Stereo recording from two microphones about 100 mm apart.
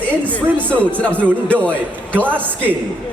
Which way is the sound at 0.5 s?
15° left (ahead or behind).